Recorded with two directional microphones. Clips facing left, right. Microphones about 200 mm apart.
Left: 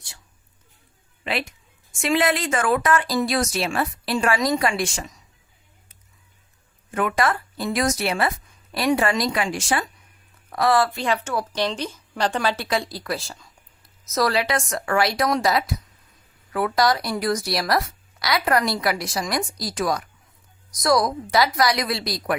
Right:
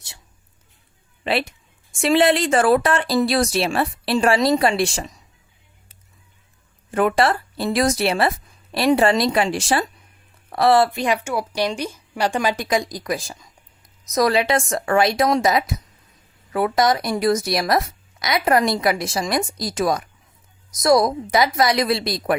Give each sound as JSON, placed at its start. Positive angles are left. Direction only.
{"t": 1.2, "sound": "speech", "side_deg": -30}
{"t": 6.9, "sound": "speech", "side_deg": -35}